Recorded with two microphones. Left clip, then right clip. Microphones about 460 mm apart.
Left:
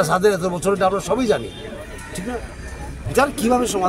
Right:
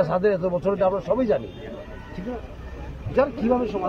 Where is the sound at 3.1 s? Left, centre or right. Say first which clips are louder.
Left 4 dB; right.